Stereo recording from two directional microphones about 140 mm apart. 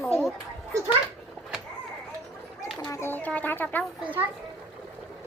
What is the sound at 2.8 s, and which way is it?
Speech, 20° left (ahead or behind).